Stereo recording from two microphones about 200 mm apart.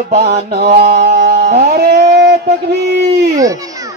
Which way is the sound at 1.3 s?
35° right (ahead or behind).